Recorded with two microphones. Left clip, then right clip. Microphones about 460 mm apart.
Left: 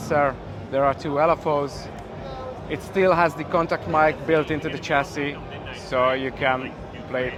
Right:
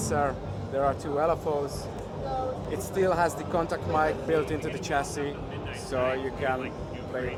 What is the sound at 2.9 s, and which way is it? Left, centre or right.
Speech, left.